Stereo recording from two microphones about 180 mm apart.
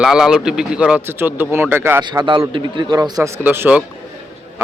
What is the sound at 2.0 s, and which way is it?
A man's voice, 25° right (ahead or behind).